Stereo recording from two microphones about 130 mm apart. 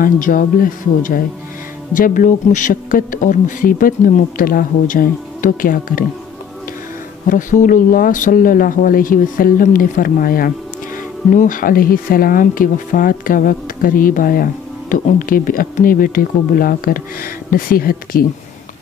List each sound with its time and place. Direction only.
0.0 s speech: 90° left
7.2 s speech: 90° left